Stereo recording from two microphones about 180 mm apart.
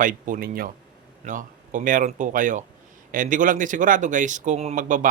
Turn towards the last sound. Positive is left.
turn(degrees=-45)  # may be behind; listen again after turning